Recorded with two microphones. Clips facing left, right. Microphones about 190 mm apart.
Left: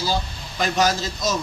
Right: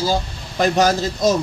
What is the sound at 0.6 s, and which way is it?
Speech, 55° right (ahead or behind).